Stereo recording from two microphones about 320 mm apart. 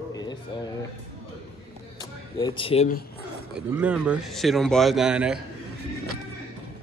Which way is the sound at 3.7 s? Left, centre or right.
Centre.